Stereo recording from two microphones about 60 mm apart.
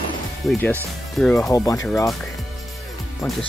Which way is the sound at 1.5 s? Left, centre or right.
Left.